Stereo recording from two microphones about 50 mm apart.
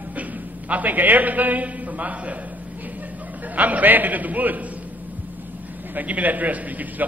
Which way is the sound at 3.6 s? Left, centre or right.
Right.